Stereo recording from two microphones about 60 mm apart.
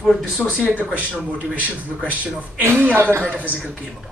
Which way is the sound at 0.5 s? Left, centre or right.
Centre.